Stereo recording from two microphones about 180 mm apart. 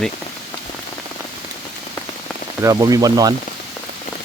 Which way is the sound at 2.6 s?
20° right (ahead or behind).